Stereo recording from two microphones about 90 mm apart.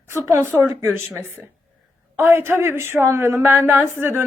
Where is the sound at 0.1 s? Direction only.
35° right (ahead or behind).